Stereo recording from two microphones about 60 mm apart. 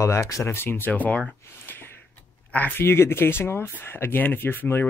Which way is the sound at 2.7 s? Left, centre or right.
Left.